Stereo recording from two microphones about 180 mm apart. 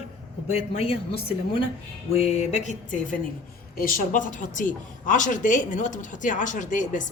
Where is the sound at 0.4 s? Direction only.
35° left (ahead or behind).